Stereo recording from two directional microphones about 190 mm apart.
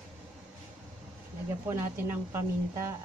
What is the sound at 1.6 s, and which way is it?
A woman's voice, 10° right (ahead or behind).